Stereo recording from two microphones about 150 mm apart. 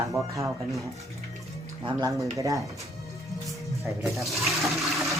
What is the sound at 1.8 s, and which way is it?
Speech, 25° right (ahead or behind).